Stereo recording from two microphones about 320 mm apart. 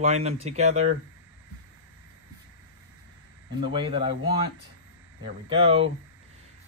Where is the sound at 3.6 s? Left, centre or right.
Centre.